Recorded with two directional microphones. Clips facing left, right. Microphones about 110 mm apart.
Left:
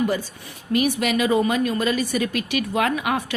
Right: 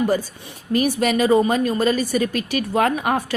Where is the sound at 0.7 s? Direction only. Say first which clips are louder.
Right 2 dB; 35° right (ahead or behind).